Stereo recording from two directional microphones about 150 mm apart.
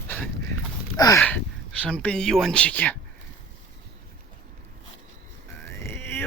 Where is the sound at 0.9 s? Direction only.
25° left (ahead or behind).